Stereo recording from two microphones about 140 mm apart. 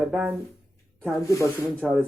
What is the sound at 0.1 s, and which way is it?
Speech, 5° right (ahead or behind).